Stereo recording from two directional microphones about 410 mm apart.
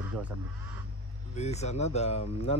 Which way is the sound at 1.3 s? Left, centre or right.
Centre.